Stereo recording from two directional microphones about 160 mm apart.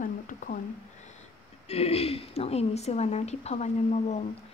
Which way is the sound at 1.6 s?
40° left (ahead or behind).